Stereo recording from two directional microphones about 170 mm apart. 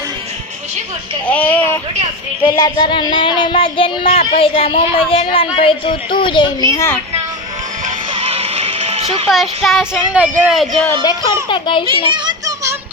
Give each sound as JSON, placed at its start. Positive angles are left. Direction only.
{"t": 1.3, "sound": "speech", "side_deg": 10}
{"t": 2.4, "sound": "speech", "side_deg": 25}
{"t": 8.1, "sound": "music", "side_deg": -35}
{"t": 9.3, "sound": "speech", "side_deg": 0}
{"t": 11.4, "sound": "speech", "side_deg": 30}
{"t": 11.9, "sound": "music", "side_deg": -30}